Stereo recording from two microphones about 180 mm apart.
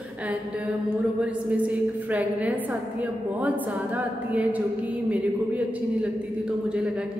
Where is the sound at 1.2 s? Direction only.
10° right (ahead or behind).